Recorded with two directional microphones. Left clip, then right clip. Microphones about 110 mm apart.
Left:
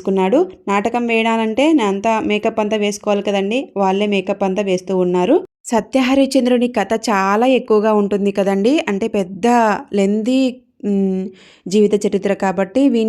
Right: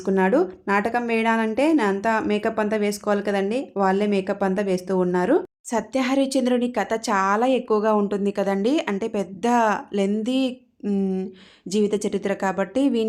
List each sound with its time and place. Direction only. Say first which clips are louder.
0.0 s speech: left 5 dB; 25° left (ahead or behind)
5.7 s speech: left 7 dB; 50° left (ahead or behind)
10.8 s speech: left 6 dB; 30° left (ahead or behind)
11.7 s speech: left 8 dB; 45° left (ahead or behind)